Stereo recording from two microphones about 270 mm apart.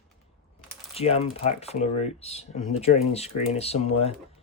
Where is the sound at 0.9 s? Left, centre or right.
Left.